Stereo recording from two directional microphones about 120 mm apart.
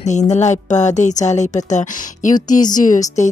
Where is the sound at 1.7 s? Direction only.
90° left.